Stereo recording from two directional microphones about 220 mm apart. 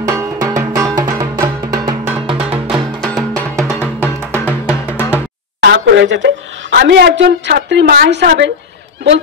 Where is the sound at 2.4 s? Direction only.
5° right (ahead or behind).